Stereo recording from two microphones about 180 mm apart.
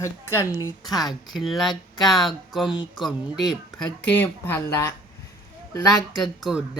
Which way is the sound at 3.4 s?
25° left (ahead or behind).